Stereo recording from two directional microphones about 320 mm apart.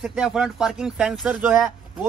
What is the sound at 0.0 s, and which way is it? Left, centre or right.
Speech, centre.